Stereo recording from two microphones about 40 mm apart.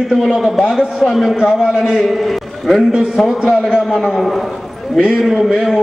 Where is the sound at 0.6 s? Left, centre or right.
Centre.